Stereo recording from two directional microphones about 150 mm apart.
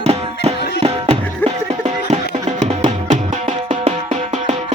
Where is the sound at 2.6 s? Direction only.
55° right (ahead or behind).